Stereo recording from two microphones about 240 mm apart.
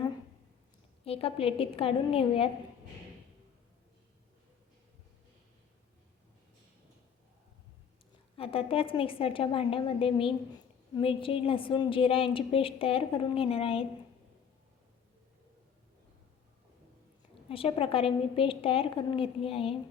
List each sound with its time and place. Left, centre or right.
1.0 s a woman's voice: left
8.4 s a woman's voice: left
17.5 s a woman's voice: left